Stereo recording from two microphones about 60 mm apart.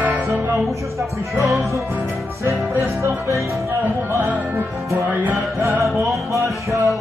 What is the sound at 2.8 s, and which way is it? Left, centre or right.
Music, right.